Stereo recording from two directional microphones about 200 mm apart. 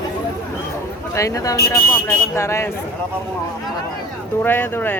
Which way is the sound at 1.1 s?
15° left (ahead or behind).